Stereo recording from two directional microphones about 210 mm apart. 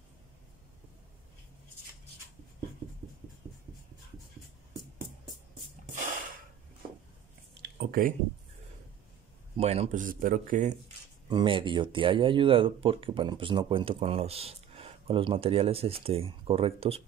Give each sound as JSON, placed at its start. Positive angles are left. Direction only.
{"t": 7.6, "sound": "a sound", "side_deg": -45}
{"t": 9.6, "sound": "speech", "side_deg": -30}
{"t": 11.2, "sound": "speech", "side_deg": -25}